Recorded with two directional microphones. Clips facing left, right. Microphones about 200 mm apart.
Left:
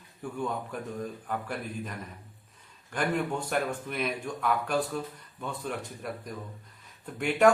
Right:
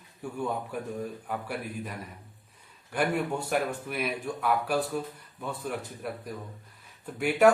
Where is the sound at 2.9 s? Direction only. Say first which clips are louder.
Right 1 dB; 10° right (ahead or behind).